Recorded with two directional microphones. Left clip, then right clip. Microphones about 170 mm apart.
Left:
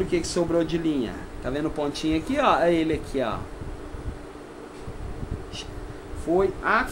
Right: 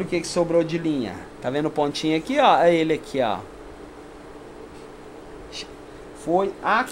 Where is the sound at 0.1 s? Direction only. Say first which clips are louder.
Right 7 dB; 35° right (ahead or behind).